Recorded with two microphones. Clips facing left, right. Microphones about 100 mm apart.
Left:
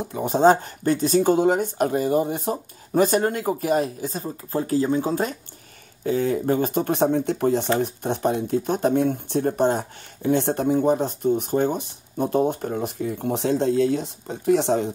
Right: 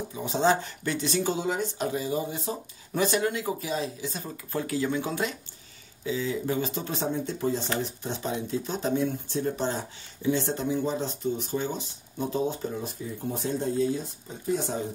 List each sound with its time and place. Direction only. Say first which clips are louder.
0.2 s speech: left 7 dB; 45° left (ahead or behind)
4.1 s speech: left 6 dB; 35° left (ahead or behind)
6.0 s speech: left 7 dB; 55° left (ahead or behind); by 14.9 s 80° left